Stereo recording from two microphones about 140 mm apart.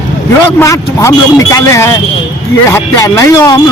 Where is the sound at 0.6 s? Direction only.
20° left (ahead or behind).